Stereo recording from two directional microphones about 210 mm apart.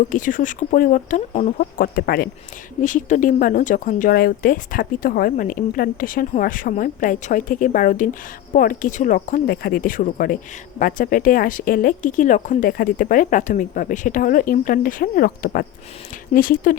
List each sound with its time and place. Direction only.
0.1 s speech: 40° left (ahead or behind)
1.5 s speech: 45° left (ahead or behind)